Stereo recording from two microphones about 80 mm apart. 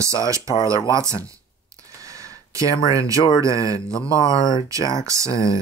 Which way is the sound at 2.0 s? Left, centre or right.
Right.